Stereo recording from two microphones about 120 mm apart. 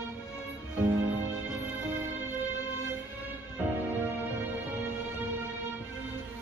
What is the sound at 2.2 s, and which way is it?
Music, 15° right (ahead or behind).